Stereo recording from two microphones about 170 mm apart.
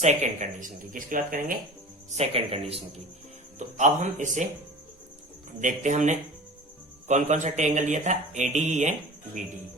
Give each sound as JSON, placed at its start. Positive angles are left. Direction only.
{"t": 0.0, "sound": "speech", "side_deg": -45}
{"t": 2.0, "sound": "speech", "side_deg": -35}
{"t": 5.5, "sound": "speech", "side_deg": -45}